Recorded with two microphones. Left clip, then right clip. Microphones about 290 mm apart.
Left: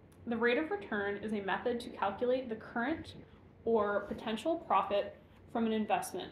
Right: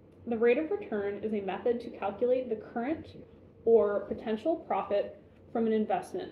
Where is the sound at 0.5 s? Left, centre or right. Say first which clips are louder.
Right 4 dB; centre.